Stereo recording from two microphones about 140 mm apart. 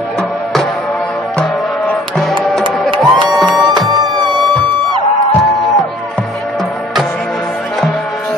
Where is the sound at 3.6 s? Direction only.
35° right (ahead or behind).